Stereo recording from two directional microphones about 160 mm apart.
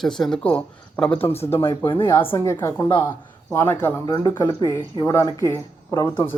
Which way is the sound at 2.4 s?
20° left (ahead or behind).